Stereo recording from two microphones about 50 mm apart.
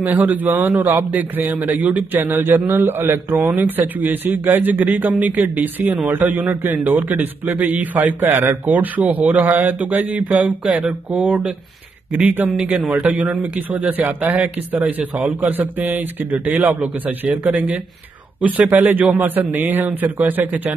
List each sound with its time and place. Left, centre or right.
0.0 s a man's voice: right
10.6 s a man's voice: right
18.8 s a man's voice: right